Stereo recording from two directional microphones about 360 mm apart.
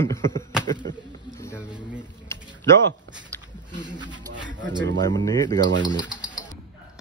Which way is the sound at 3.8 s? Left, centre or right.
Centre.